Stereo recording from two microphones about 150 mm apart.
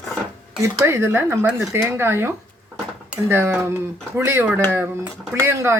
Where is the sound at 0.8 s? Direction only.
15° right (ahead or behind).